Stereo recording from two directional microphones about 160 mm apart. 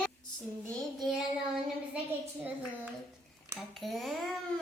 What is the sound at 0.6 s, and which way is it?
Speech, centre (ahead or behind).